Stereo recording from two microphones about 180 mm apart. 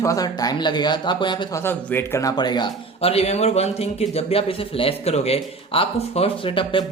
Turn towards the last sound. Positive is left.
turn(degrees=30)  # may be behind; listen again after turning